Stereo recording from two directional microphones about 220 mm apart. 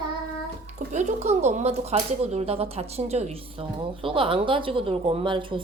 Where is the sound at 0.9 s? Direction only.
30° right (ahead or behind).